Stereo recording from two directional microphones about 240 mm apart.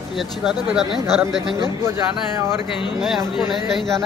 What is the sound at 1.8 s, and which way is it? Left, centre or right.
Speech, centre.